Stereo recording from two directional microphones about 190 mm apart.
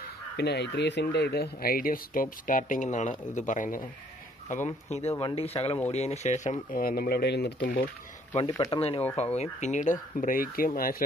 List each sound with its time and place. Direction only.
0.4 s speech: 60° left (ahead or behind)
8.4 s speech: 25° left (ahead or behind); by 11.1 s 50° left (ahead or behind)